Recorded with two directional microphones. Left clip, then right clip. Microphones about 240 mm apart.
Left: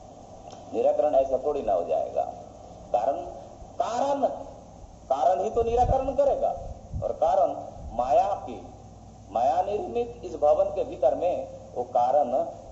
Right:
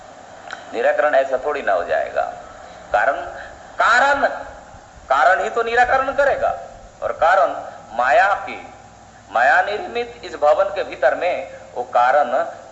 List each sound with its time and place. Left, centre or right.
0.7 s a man's voice: right